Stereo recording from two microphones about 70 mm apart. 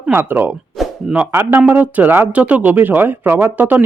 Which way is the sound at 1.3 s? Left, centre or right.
Right.